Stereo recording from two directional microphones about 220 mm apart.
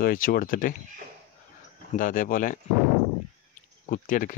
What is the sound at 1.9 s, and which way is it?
Speech, 35° left (ahead or behind).